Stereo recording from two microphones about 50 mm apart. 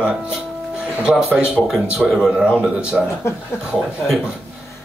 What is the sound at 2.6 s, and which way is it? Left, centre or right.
Speech, right.